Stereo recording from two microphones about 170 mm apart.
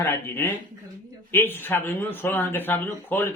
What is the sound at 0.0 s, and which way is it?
Speech, 15° left (ahead or behind).